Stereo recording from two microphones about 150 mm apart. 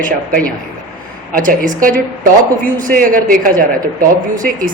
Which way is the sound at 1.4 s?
60° right (ahead or behind).